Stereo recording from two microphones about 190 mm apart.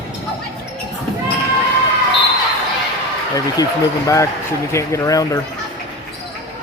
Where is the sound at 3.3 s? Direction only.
15° left (ahead or behind).